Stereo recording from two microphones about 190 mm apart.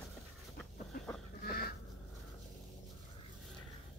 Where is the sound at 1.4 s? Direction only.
55° left (ahead or behind).